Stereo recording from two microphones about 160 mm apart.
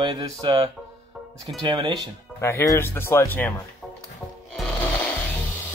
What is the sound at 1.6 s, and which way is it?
Speech, 30° right (ahead or behind).